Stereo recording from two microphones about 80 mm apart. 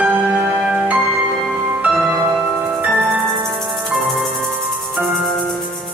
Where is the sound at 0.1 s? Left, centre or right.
Centre.